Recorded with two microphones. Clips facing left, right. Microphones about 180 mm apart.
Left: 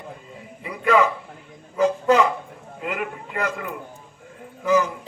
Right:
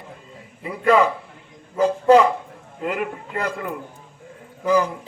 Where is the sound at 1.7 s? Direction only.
30° right (ahead or behind).